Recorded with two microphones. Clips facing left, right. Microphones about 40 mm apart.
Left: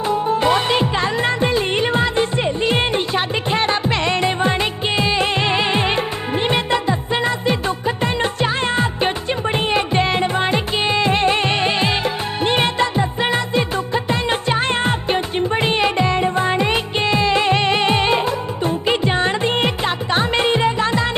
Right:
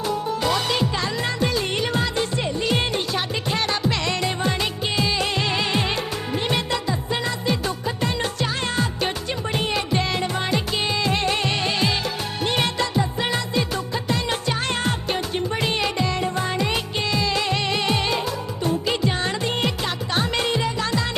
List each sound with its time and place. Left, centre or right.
0.1 s music: left